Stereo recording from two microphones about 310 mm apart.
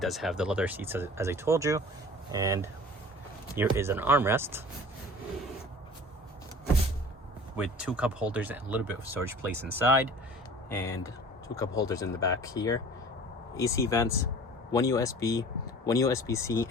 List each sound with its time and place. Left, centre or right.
0.0 s speech: centre
7.5 s speech: centre
9.0 s speech: left
10.7 s speech: centre